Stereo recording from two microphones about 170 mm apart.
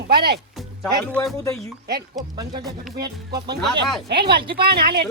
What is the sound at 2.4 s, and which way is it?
Speech, 20° right (ahead or behind).